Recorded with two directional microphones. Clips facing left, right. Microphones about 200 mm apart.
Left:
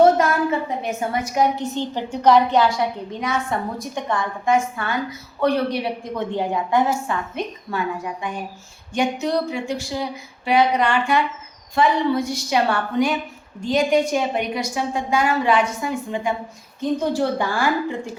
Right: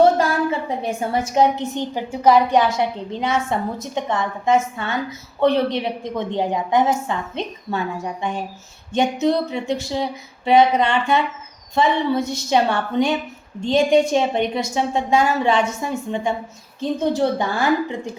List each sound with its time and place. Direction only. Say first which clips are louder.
0.8 s a woman's voice: right 2 dB; 30° right (ahead or behind)